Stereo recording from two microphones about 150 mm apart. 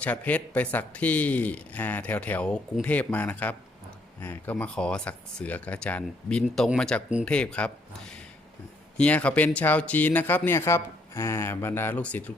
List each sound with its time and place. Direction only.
0.0 s speech: 10° left (ahead or behind)